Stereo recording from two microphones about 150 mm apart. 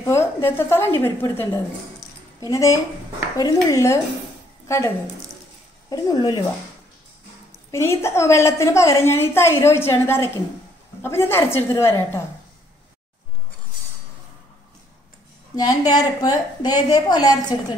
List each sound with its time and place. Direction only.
0.0 s a woman's voice: 15° left (ahead or behind)
7.7 s a woman's voice: 15° left (ahead or behind)
15.5 s a woman's voice: 25° left (ahead or behind)